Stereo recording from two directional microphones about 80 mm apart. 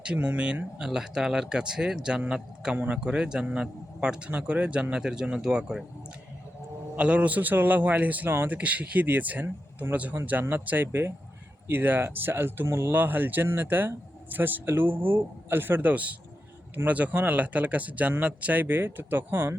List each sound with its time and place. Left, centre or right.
0.0 s speech: centre
6.9 s speech: centre